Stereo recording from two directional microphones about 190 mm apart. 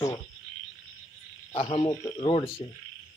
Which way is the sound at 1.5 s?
30° left (ahead or behind).